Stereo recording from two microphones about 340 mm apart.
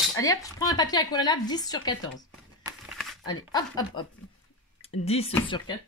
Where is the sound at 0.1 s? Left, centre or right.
Centre.